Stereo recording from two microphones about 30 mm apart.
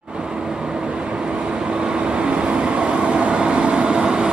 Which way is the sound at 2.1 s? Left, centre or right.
Right.